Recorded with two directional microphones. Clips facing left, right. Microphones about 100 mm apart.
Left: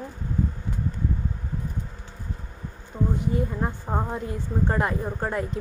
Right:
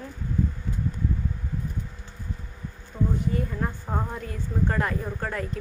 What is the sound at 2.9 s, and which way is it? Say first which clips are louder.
A woman's voice: left 1 dB; 15° left (ahead or behind).